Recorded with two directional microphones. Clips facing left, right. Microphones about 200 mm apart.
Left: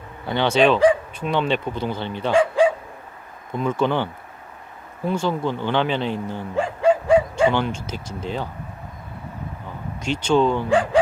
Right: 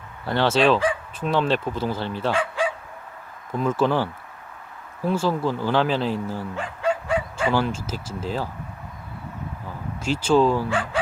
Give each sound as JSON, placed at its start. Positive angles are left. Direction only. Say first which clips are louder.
{"t": 0.3, "sound": "speech", "louder": "left 1 dB", "side_deg": 0}
{"t": 2.3, "sound": "speech", "louder": "left 11 dB", "side_deg": 30}
{"t": 3.5, "sound": "speech", "louder": "even", "side_deg": -5}
{"t": 6.6, "sound": "bow-wow", "louder": "left 9 dB", "side_deg": 30}
{"t": 7.5, "sound": "speech", "louder": "even", "side_deg": -5}
{"t": 10.0, "sound": "speech", "louder": "even", "side_deg": -5}
{"t": 10.7, "sound": "speech", "louder": "left 8 dB", "side_deg": 35}